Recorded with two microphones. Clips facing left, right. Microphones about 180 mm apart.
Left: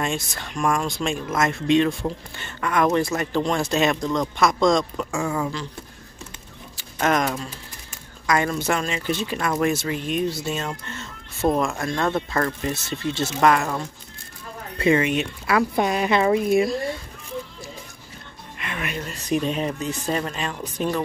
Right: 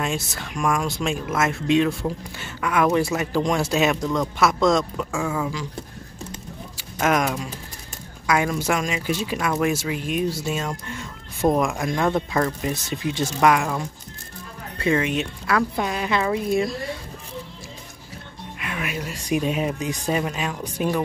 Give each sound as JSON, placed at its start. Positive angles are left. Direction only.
{"t": 0.0, "sound": "speech", "side_deg": -5}
{"t": 7.0, "sound": "speech", "side_deg": -10}
{"t": 14.9, "sound": "speech", "side_deg": 0}
{"t": 15.7, "sound": "speech", "side_deg": 20}
{"t": 18.6, "sound": "speech", "side_deg": -5}